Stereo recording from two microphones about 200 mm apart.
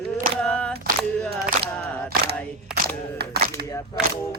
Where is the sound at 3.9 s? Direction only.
20° left (ahead or behind).